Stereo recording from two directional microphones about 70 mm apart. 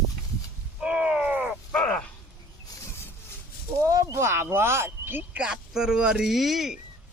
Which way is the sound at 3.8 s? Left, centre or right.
Right.